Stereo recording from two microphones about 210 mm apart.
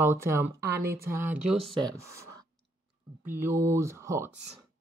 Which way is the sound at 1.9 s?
15° right (ahead or behind).